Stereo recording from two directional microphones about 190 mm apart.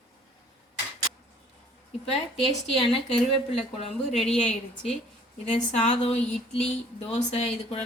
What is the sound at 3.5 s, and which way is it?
Speech, 30° left (ahead or behind).